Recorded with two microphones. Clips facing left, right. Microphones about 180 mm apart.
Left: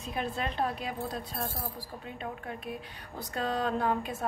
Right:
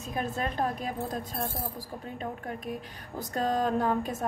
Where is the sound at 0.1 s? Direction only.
45° right (ahead or behind).